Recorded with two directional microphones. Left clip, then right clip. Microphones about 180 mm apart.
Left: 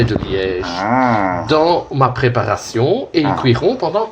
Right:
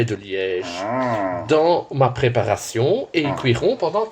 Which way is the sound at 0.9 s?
5° right (ahead or behind).